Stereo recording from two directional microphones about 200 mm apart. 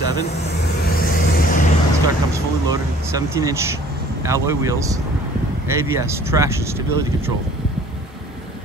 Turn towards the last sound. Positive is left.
turn(degrees=-15)  # may be behind; listen again after turning